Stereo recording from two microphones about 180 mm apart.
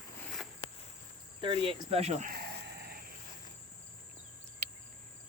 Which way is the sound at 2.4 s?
60° right (ahead or behind).